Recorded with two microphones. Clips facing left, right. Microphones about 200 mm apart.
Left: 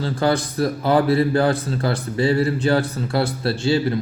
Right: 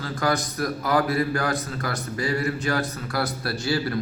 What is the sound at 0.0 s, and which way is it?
A man's voice, 30° left (ahead or behind).